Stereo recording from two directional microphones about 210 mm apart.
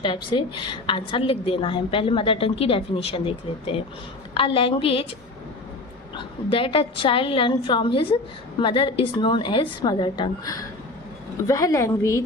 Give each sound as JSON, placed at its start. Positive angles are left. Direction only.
{"t": 0.0, "sound": "a woman's voice", "side_deg": 25}
{"t": 6.1, "sound": "a woman's voice", "side_deg": 25}